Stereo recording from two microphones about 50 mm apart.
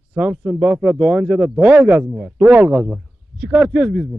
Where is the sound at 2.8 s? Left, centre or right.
Centre.